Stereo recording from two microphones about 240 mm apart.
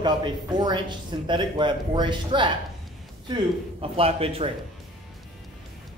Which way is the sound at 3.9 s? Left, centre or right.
Right.